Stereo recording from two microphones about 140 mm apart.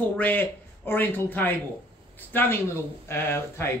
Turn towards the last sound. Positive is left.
turn(degrees=15)  # may be behind; listen again after turning